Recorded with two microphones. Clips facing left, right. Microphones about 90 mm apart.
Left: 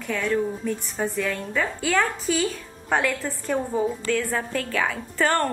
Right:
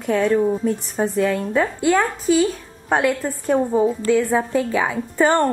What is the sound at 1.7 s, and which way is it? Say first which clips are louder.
Speech: right 5 dB; 10° right (ahead or behind).